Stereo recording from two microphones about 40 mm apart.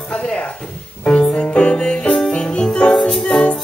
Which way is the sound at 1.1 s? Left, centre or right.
Left.